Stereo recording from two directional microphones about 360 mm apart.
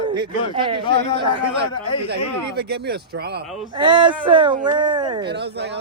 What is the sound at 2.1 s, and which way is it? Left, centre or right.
Speech, right.